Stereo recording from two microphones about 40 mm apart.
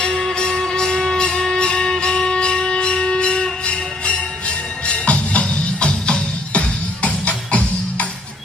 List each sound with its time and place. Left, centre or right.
0.0 s music: centre; by 8.0 s left